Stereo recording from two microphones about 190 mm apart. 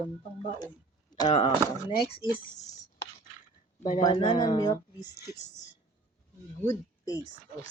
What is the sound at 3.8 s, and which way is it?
Speech, 40° left (ahead or behind).